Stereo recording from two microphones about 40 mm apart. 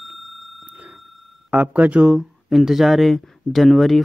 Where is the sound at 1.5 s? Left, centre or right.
Right.